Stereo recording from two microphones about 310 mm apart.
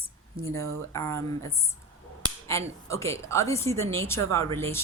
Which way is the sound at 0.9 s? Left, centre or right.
Centre.